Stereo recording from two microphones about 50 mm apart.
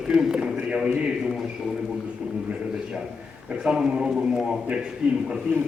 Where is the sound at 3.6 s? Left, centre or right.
Centre.